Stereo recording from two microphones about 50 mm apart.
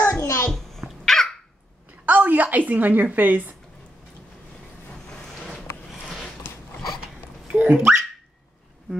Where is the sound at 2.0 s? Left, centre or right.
Right.